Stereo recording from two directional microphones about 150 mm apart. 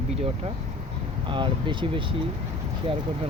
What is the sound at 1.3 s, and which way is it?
Speech, 35° right (ahead or behind).